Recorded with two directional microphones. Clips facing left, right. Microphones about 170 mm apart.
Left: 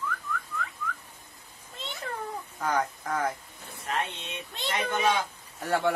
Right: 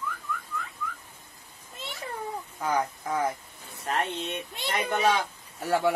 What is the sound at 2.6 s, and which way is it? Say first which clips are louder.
Speech: right 1 dB; 10° right (ahead or behind).